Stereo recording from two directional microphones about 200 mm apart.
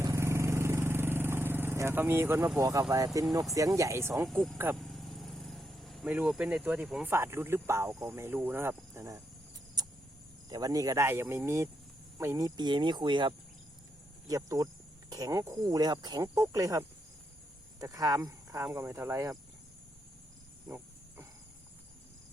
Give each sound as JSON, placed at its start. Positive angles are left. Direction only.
{"t": 0.0, "sound": "vehicle", "side_deg": -15}
{"t": 3.2, "sound": "speech", "side_deg": -15}
{"t": 4.3, "sound": "speech", "side_deg": 0}
{"t": 4.5, "sound": "speech", "side_deg": -10}
{"t": 4.8, "sound": "vehicle", "side_deg": 0}
{"t": 7.1, "sound": "speech", "side_deg": -10}
{"t": 9.8, "sound": "a sound", "side_deg": -20}
{"t": 10.5, "sound": "speech", "side_deg": -20}
{"t": 20.7, "sound": "wild animals", "side_deg": -10}